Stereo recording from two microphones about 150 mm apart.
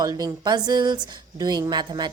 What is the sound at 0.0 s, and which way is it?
Speech, 25° right (ahead or behind).